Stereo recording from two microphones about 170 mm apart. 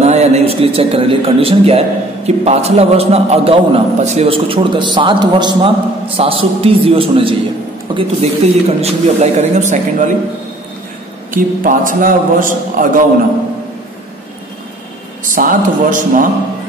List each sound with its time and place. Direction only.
0.0 s a man's voice: 40° right (ahead or behind)
11.3 s a man's voice: 55° right (ahead or behind)
15.3 s a man's voice: 50° right (ahead or behind)